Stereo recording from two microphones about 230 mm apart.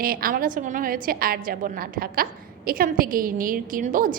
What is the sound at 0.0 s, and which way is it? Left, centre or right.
A woman's voice, right.